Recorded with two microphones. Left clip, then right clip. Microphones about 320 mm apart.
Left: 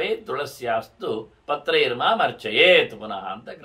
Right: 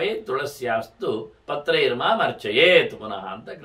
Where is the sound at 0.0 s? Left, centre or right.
Centre.